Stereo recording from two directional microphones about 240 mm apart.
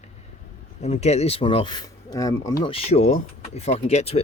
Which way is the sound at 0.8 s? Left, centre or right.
Left.